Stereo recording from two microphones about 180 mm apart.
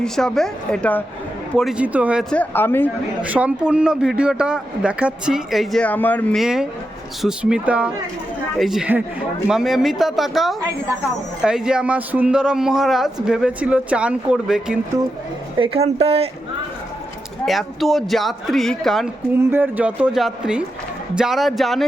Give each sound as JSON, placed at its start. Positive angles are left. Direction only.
{"t": 0.0, "sound": "a man's voice", "side_deg": 5}
{"t": 1.5, "sound": "speech", "side_deg": -5}
{"t": 2.3, "sound": "speech", "side_deg": 10}
{"t": 3.2, "sound": "a man's voice", "side_deg": -10}
{"t": 15.5, "sound": "speech", "side_deg": -30}
{"t": 17.4, "sound": "a man's voice", "side_deg": 0}
{"t": 19.3, "sound": "a man's voice", "side_deg": -10}